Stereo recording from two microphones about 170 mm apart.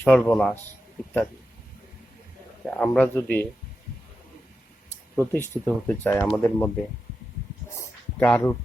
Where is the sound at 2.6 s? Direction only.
5° left (ahead or behind).